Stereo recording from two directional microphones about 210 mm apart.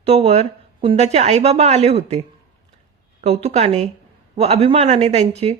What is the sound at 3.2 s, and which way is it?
A woman's voice, 30° right (ahead or behind).